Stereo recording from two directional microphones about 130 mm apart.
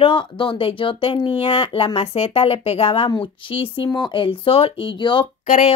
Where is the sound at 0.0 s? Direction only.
40° left (ahead or behind).